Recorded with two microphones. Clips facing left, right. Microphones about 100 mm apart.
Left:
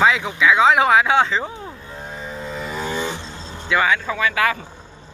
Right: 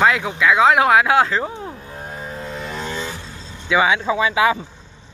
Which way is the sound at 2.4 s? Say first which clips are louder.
Left 3 dB; centre (ahead or behind).